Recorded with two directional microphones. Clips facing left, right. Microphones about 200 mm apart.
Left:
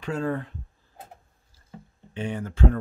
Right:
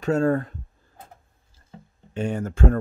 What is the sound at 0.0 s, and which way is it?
Speech, 45° right (ahead or behind).